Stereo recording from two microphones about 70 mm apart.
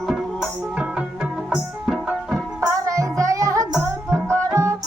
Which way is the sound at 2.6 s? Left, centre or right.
Right.